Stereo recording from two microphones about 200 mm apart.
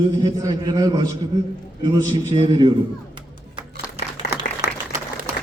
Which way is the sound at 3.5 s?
25° right (ahead or behind).